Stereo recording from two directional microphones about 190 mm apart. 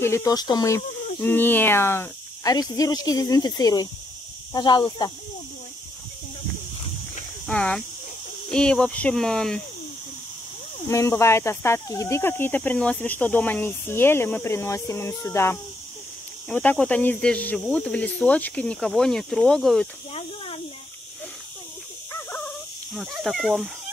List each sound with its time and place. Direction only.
0.0 s speech: 15° left (ahead or behind)
7.4 s speech: 5° left (ahead or behind)
10.9 s speech: 15° left (ahead or behind)
20.1 s snake: 30° left (ahead or behind)
22.9 s speech: centre (ahead or behind)